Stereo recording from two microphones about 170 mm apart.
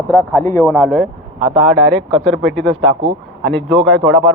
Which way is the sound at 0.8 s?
Centre (ahead or behind).